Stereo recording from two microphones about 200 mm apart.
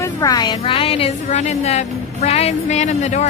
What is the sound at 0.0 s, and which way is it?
A woman's voice, 20° left (ahead or behind).